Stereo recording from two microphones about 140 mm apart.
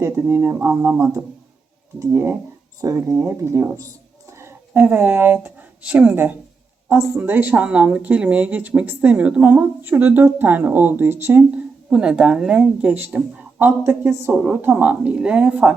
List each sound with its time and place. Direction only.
0.0 s speech: 20° right (ahead or behind)
11.9 s speech: 5° right (ahead or behind)